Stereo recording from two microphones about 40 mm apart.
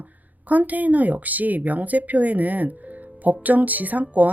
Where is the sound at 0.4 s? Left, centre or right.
Right.